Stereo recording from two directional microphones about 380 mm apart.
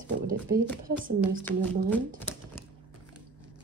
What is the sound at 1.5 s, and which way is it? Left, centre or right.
Speech, centre.